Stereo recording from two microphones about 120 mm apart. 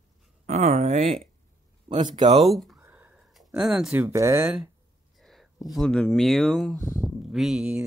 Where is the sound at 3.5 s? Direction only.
5° right (ahead or behind).